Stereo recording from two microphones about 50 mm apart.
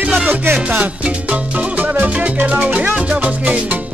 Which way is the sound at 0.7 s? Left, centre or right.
Right.